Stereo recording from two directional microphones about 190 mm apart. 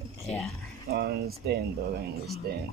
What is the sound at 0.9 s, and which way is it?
Speech, 55° right (ahead or behind).